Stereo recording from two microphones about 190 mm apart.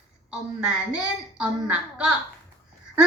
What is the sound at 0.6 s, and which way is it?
A woman's voice, 5° right (ahead or behind).